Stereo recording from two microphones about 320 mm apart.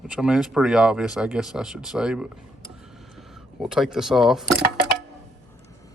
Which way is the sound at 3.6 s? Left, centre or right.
Centre.